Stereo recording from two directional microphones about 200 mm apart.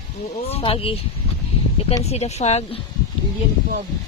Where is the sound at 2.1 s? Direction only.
30° left (ahead or behind).